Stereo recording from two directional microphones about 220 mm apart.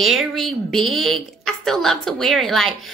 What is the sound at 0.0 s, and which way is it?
Speech, centre (ahead or behind).